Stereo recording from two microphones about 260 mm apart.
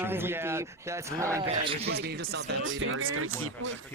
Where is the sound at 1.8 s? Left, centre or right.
Right.